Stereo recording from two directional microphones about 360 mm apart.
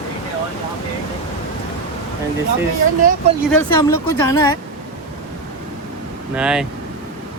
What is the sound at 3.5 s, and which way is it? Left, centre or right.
Speech, centre.